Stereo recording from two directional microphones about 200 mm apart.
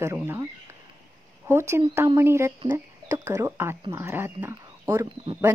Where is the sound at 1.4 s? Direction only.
10° right (ahead or behind).